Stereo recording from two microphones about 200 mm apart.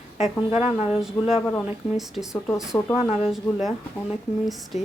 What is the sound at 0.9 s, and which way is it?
Speech, centre (ahead or behind).